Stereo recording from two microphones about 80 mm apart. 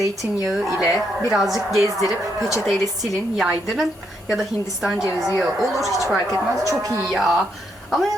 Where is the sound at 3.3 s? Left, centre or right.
Centre.